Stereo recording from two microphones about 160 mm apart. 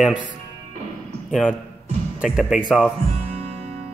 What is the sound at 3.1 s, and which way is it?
Music, 40° right (ahead or behind).